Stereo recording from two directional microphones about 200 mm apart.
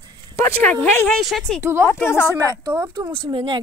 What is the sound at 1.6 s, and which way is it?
Speech, 10° right (ahead or behind).